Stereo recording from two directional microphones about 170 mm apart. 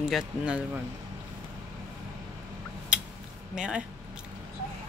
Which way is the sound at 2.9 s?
5° right (ahead or behind).